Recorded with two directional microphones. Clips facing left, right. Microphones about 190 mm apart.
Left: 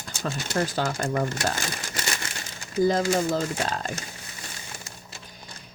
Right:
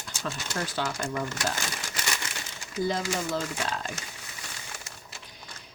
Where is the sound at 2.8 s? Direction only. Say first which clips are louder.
Left 7 dB; 40° left (ahead or behind).